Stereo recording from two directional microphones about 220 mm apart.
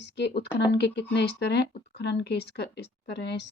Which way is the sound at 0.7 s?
50° left (ahead or behind).